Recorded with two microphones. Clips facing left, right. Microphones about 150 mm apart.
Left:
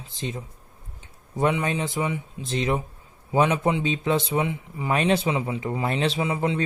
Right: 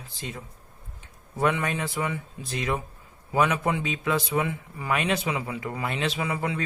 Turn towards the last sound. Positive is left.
turn(degrees=25)  # may be behind; listen again after turning